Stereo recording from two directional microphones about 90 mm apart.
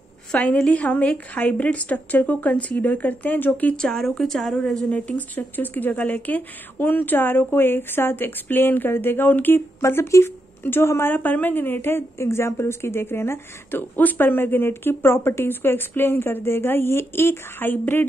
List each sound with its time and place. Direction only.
0.3 s a woman's voice: 10° left (ahead or behind)
4.9 s speech: 15° left (ahead or behind)